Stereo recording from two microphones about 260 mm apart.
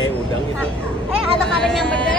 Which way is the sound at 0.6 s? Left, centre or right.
Centre.